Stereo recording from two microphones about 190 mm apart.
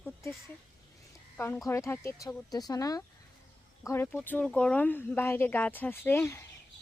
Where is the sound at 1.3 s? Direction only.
10° left (ahead or behind).